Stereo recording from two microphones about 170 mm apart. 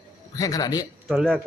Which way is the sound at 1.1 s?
Centre (ahead or behind).